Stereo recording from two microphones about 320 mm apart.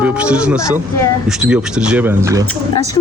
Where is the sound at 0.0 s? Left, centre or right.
Centre.